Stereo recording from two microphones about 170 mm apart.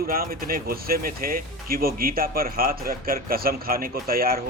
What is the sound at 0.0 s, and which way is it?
Speech, 60° right (ahead or behind).